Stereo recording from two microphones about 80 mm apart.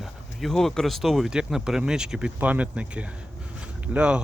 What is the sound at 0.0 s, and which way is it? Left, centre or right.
Speech, centre.